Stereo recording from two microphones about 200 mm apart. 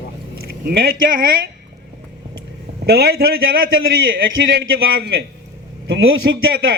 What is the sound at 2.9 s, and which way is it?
Speech, 50° right (ahead or behind).